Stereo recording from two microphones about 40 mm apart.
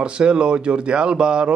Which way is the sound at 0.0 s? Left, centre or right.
Right.